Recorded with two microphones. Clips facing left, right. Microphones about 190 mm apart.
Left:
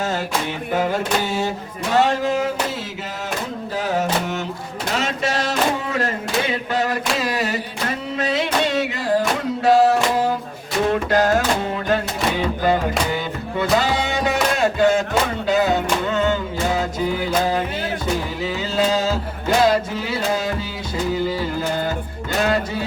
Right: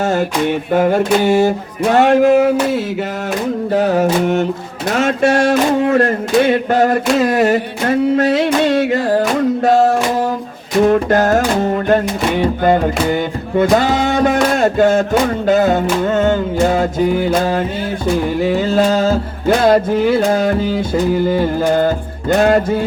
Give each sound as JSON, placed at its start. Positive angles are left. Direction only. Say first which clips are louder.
{"t": 0.0, "sound": "music", "louder": "right 8 dB", "side_deg": -55}
{"t": 4.0, "sound": "music", "louder": "right 9 dB", "side_deg": -55}